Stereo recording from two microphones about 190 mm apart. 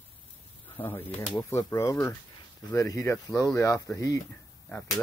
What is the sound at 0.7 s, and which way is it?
Speech, 10° left (ahead or behind).